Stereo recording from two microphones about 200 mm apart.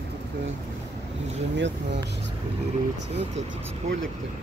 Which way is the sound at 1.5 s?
60° right (ahead or behind).